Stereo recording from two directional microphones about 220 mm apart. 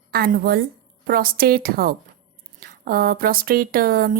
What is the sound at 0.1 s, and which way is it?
Speech, 45° right (ahead or behind).